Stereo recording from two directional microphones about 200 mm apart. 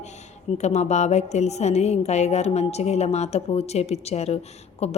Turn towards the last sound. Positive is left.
turn(degrees=30)  # may be behind; listen again after turning